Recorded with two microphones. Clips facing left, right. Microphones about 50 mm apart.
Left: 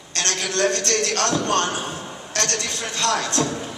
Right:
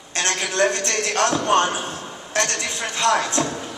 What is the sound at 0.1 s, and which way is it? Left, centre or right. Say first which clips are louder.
A man's voice: right 1 dB; centre.